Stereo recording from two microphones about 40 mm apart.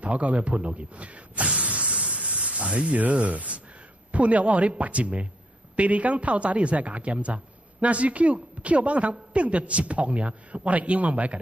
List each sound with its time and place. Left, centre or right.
0.0 s speech: right
1.5 s a sound: right
3.0 s speech: right